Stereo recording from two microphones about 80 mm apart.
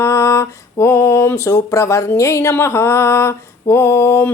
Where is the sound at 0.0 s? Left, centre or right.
Left.